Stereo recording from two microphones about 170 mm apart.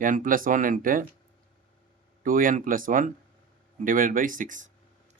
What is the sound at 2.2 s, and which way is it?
Speech, 55° right (ahead or behind).